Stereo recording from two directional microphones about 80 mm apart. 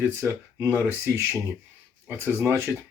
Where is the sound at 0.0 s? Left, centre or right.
Right.